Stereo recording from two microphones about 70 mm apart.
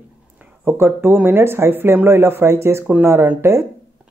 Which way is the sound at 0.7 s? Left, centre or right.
Right.